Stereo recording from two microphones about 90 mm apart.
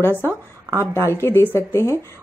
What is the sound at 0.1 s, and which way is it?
Speech, 25° right (ahead or behind).